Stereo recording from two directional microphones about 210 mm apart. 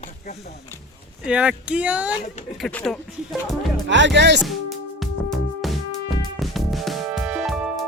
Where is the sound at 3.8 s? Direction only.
60° right (ahead or behind).